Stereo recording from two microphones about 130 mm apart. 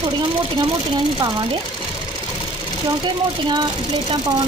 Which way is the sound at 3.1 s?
35° right (ahead or behind).